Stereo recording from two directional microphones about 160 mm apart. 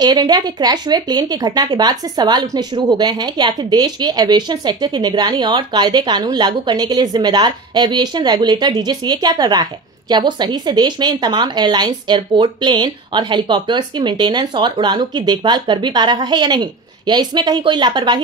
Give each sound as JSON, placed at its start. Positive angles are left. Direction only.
{"t": 0.0, "sound": "a woman's voice", "side_deg": -25}